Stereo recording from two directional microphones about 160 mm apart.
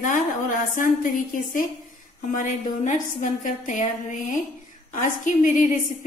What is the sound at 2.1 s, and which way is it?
A woman's voice, 55° left (ahead or behind).